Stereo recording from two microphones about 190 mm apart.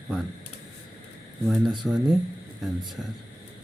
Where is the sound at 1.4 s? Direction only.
Centre (ahead or behind).